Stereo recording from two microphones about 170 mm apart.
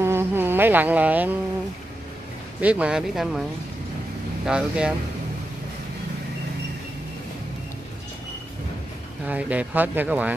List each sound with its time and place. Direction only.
0.0 s insect: 15° right (ahead or behind)
2.6 s speech: 5° right (ahead or behind)
4.5 s speech: 5° right (ahead or behind)
9.2 s speech: 10° right (ahead or behind)